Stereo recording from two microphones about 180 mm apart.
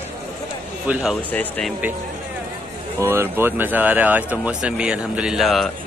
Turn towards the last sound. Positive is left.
turn(degrees=0)  # may be behind; listen again after turning